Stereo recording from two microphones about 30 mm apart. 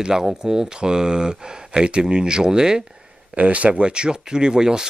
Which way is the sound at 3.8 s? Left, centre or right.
Right.